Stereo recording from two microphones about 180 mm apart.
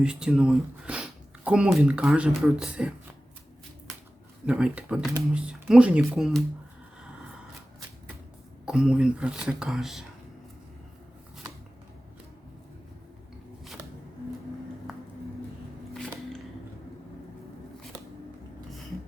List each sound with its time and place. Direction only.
0.0 s speech: 5° right (ahead or behind)
4.4 s speech: 5° right (ahead or behind)
8.6 s speech: 5° right (ahead or behind)